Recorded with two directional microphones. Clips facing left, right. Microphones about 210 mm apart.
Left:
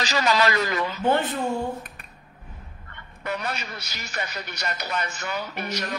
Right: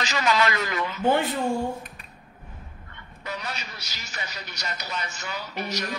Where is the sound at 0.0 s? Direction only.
35° left (ahead or behind).